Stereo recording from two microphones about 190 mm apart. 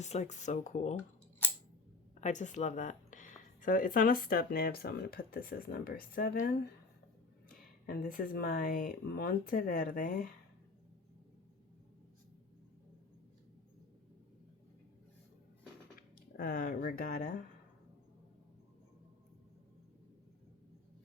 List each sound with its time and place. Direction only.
0.0 s speech: 35° left (ahead or behind)
1.4 s scissors: 10° left (ahead or behind)
2.2 s speech: 40° left (ahead or behind)
7.9 s speech: 50° left (ahead or behind)
16.4 s speech: 50° left (ahead or behind)